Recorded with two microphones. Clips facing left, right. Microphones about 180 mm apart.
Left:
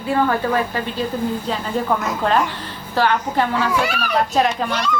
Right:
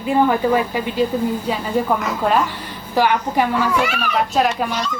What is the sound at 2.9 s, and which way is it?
A woman's voice, 10° right (ahead or behind).